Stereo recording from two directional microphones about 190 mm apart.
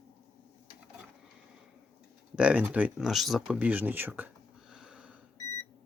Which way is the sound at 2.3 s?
5° right (ahead or behind).